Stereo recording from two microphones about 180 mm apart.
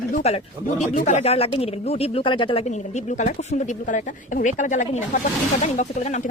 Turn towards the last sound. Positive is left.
turn(degrees=40)  # may be behind; listen again after turning